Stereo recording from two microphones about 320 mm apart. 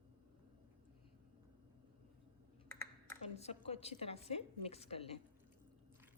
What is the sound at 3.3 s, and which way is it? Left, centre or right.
A woman's voice, centre.